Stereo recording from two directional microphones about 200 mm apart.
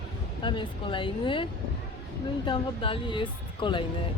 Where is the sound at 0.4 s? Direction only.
25° left (ahead or behind).